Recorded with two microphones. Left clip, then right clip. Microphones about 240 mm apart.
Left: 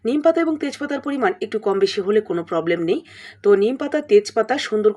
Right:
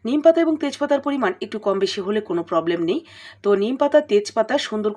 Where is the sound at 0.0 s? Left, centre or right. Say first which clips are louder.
Right 2 dB; centre.